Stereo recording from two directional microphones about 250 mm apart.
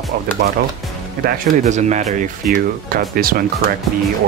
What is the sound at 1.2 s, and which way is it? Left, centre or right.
Speech, right.